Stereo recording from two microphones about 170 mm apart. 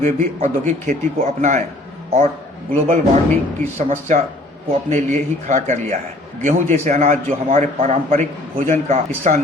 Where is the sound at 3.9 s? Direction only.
40° right (ahead or behind).